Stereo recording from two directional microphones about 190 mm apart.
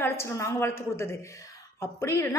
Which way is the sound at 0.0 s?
15° left (ahead or behind).